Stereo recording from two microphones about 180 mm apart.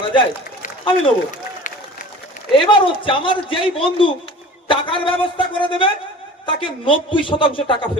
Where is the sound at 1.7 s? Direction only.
45° left (ahead or behind).